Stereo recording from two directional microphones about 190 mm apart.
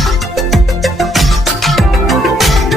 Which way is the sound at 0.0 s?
Centre (ahead or behind).